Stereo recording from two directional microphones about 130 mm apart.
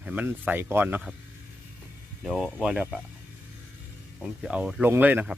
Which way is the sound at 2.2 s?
5° right (ahead or behind).